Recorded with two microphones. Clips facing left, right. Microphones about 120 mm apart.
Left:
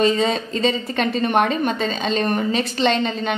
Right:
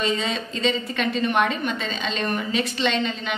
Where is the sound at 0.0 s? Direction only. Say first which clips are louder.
Left 7 dB; 40° left (ahead or behind).